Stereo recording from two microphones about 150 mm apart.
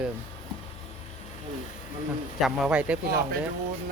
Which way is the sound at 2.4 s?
5° right (ahead or behind).